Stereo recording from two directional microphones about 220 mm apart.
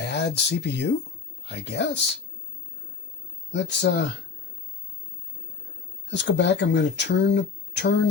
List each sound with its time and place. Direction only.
0.1 s speech: 50° left (ahead or behind)
3.5 s speech: 55° left (ahead or behind)
6.1 s speech: 55° left (ahead or behind)